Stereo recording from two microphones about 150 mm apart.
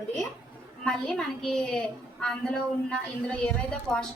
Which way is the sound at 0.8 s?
5° left (ahead or behind).